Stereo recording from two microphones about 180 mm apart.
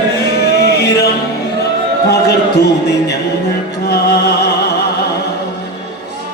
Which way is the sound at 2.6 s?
65° left (ahead or behind).